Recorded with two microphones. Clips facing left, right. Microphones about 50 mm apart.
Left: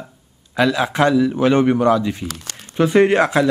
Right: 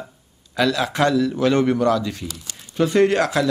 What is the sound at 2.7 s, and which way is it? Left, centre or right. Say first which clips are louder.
Speech: left 3 dB; left.